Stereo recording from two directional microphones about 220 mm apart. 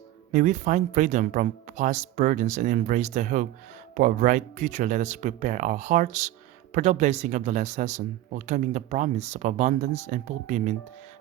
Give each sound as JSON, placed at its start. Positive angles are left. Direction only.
{"t": 0.3, "sound": "speech", "side_deg": -35}